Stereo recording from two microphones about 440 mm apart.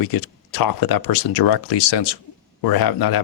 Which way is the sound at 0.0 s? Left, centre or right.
Left.